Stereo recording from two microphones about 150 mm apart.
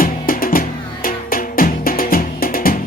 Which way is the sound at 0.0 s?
70° left (ahead or behind).